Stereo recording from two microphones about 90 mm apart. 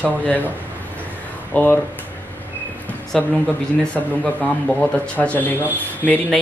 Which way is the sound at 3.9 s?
15° left (ahead or behind).